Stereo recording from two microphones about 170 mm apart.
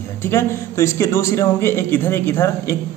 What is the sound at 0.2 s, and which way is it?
A man's voice, 15° left (ahead or behind).